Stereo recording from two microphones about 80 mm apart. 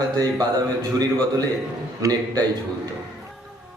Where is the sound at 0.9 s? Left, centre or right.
Right.